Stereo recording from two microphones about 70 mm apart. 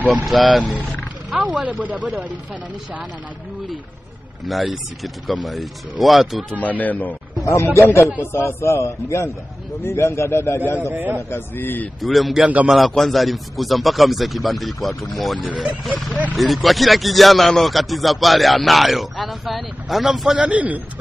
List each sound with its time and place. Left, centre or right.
0.2 s speech: centre
1.3 s speech: centre
4.5 s speech: centre
6.6 s speech: left
7.4 s a man's voice: left
10.8 s speech: right
11.2 s a man's voice: left
12.0 s speech: centre
15.4 s speech: centre
16.3 s speech: centre
20.3 s speech: centre